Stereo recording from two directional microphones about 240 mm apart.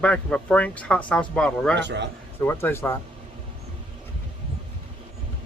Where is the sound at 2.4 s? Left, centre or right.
Centre.